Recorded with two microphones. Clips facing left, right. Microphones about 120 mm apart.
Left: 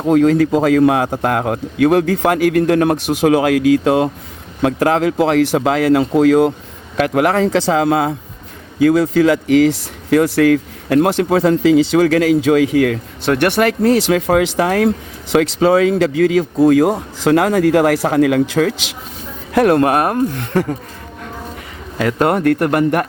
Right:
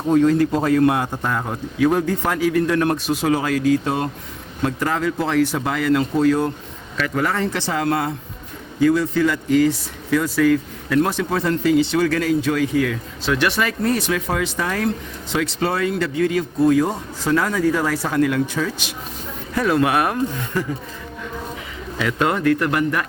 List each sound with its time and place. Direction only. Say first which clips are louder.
0.1 s speech: left 4 dB; 90° left
6.9 s speech: left 8 dB; 65° left (ahead or behind); by 18.9 s 90° left
19.5 s a man's voice: left 6 dB; 55° left (ahead or behind)
20.3 s speech: left 6 dB; 65° left (ahead or behind)
21.9 s a man's voice: left 5 dB; 45° left (ahead or behind)